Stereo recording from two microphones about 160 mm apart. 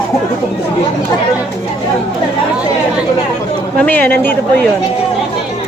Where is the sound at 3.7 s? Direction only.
10° left (ahead or behind).